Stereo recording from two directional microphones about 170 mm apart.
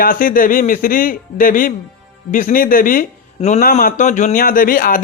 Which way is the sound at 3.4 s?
45° left (ahead or behind).